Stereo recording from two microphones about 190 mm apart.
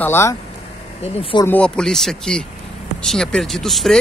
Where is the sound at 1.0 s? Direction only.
30° left (ahead or behind).